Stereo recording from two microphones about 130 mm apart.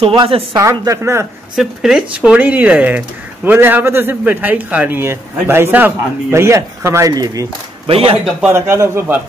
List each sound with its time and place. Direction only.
0.0 s a woman's voice: 40° right (ahead or behind)
0.6 s speech: 25° right (ahead or behind)
1.6 s a man's voice: 5° right (ahead or behind); by 7.4 s 25° right (ahead or behind)
7.8 s speech: 45° right (ahead or behind)
8.5 s speech: 20° right (ahead or behind)